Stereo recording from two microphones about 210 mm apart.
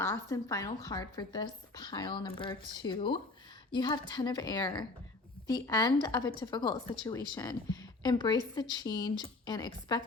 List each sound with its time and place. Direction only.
0.0 s a woman's voice: 15° left (ahead or behind)